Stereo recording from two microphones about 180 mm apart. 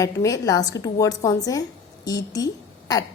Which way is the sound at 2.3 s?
20° left (ahead or behind).